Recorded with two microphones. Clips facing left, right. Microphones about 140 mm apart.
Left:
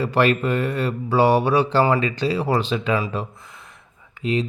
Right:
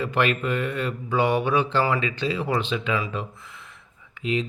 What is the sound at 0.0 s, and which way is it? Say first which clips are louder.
Speech: left 5 dB; 35° left (ahead or behind).